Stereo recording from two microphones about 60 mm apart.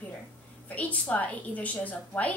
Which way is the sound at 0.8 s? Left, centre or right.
Left.